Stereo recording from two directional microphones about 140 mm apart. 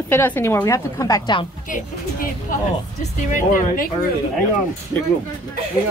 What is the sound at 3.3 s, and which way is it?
Speech, 70° left (ahead or behind).